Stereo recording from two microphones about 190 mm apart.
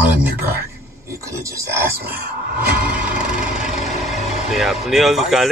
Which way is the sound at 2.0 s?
50° right (ahead or behind).